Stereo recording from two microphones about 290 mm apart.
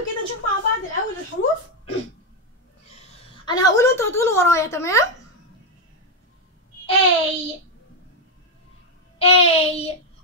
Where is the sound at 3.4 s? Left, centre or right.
Centre.